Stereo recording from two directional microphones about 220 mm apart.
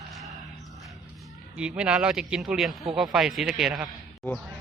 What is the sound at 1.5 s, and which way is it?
A man's voice, 5° right (ahead or behind).